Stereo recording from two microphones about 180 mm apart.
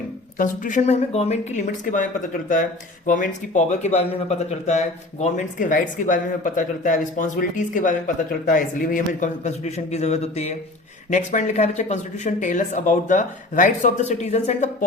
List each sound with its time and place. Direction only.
0.3 s speech: 45° left (ahead or behind)
3.1 s speech: 45° left (ahead or behind)